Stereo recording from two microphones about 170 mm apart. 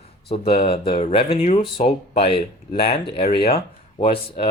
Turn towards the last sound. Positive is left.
turn(degrees=35)  # may be behind; listen again after turning